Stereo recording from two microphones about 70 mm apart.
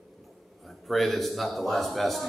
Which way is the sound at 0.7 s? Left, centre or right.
Centre.